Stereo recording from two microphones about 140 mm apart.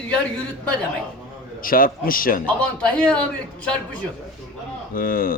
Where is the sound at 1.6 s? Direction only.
90° left.